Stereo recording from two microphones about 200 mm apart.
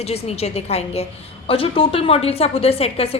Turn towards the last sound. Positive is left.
turn(degrees=30)  # may be behind; listen again after turning